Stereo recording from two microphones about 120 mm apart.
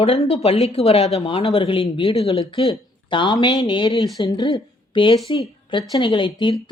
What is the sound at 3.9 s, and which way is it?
Speech, centre (ahead or behind).